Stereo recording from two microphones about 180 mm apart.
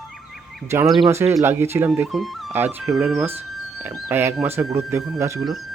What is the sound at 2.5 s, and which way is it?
Speech, 10° right (ahead or behind).